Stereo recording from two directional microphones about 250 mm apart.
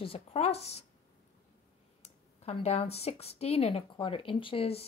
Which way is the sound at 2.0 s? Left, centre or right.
Left.